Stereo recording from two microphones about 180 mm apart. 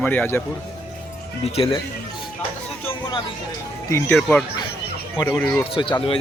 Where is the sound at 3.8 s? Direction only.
15° left (ahead or behind).